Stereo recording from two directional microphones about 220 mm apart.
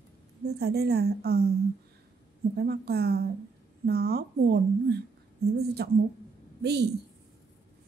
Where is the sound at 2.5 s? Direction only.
45° right (ahead or behind).